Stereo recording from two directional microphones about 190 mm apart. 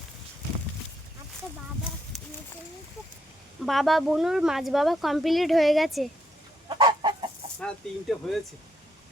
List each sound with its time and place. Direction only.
2.1 s a sound: centre (ahead or behind)
3.7 s speech: centre (ahead or behind)
6.7 s chicken: 25° right (ahead or behind)
7.6 s speech: centre (ahead or behind)